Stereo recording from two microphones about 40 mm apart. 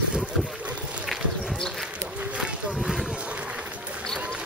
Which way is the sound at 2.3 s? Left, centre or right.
Right.